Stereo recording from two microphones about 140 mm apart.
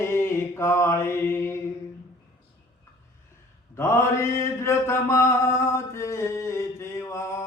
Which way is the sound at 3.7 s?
20° left (ahead or behind).